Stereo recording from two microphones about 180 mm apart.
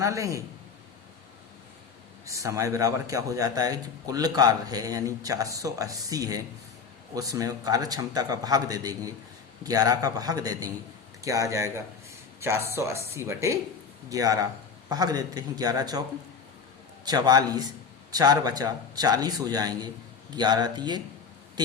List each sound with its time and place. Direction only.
0.0 s speech: 15° right (ahead or behind)
2.2 s a man's voice: 15° right (ahead or behind)
17.1 s a man's voice: 20° right (ahead or behind)